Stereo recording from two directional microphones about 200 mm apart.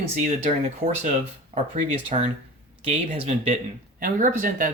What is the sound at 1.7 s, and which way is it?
Speech, 35° right (ahead or behind).